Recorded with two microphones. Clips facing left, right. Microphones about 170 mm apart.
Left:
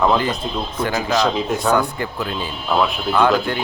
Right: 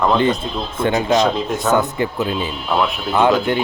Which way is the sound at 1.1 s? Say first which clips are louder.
Right 2 dB; centre (ahead or behind).